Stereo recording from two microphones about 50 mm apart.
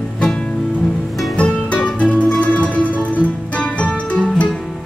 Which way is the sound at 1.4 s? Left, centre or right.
Left.